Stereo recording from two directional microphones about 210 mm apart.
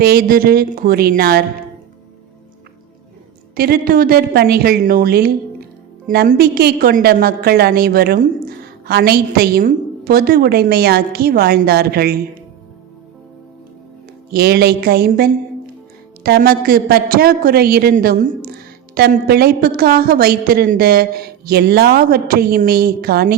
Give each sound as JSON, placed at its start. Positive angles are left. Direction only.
{"t": 0.0, "sound": "a woman's voice", "side_deg": -45}
{"t": 3.5, "sound": "a woman's voice", "side_deg": -45}
{"t": 14.3, "sound": "a woman's voice", "side_deg": -50}